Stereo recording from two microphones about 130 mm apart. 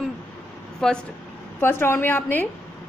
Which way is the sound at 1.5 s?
15° left (ahead or behind).